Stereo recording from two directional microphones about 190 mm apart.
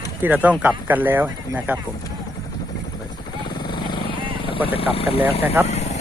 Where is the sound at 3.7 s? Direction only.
25° left (ahead or behind).